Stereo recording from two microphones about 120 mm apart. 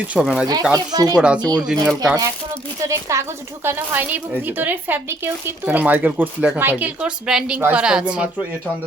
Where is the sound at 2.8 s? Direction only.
25° right (ahead or behind).